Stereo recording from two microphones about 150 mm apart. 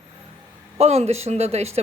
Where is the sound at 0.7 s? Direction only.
45° right (ahead or behind).